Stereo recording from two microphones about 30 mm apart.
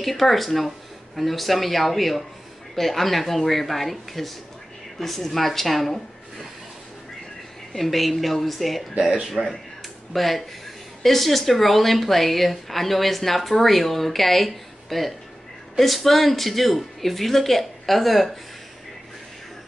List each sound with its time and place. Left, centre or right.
0.0 s a woman's voice: centre
7.7 s a woman's voice: centre
9.4 s speech: right
10.1 s a woman's voice: centre